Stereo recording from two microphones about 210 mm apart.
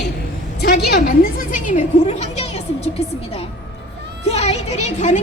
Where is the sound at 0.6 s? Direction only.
45° left (ahead or behind); by 2.9 s 30° left (ahead or behind).